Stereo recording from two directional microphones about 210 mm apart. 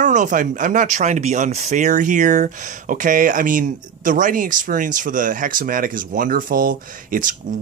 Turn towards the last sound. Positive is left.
turn(degrees=-40)  # may be behind; listen again after turning